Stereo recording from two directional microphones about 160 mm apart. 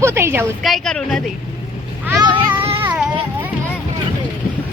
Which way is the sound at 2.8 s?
10° right (ahead or behind).